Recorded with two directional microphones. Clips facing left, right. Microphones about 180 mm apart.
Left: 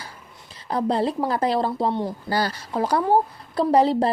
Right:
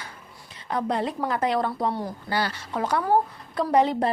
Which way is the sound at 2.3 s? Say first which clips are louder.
Even; 40° left (ahead or behind).